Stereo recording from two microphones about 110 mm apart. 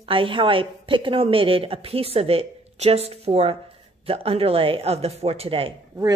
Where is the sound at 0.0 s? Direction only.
55° right (ahead or behind).